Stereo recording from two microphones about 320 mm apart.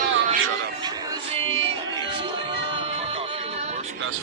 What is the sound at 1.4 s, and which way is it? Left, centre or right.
Music, centre.